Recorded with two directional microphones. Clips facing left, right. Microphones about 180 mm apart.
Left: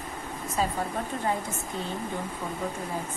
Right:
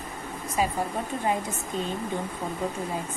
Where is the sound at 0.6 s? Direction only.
10° right (ahead or behind).